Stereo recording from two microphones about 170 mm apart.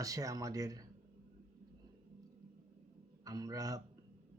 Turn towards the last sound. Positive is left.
turn(degrees=-20)  # may be behind; listen again after turning